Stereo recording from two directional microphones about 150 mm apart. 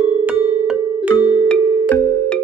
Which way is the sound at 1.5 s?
5° left (ahead or behind).